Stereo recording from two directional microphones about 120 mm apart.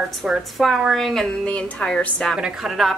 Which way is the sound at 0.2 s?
Centre (ahead or behind).